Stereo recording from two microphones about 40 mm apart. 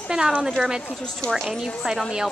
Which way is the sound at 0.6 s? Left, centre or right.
Centre.